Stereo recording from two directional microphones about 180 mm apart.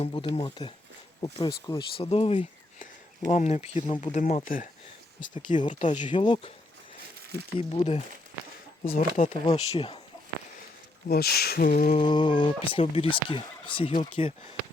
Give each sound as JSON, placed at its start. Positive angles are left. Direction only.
{"t": 0.0, "sound": "speech", "side_deg": 30}
{"t": 6.1, "sound": "speech", "side_deg": 30}
{"t": 7.6, "sound": "speech", "side_deg": 30}
{"t": 8.9, "sound": "speech", "side_deg": 50}
{"t": 11.1, "sound": "a sound", "side_deg": 60}
{"t": 11.9, "sound": "speech", "side_deg": 25}